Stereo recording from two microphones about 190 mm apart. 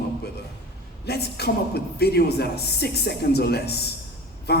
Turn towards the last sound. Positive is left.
turn(degrees=60)  # may be behind; listen again after turning